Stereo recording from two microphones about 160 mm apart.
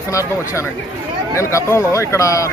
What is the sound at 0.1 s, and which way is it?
Speech, 20° left (ahead or behind).